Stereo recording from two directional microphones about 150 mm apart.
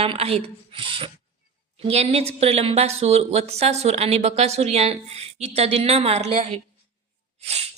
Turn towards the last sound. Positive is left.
turn(degrees=-45)  # may be behind; listen again after turning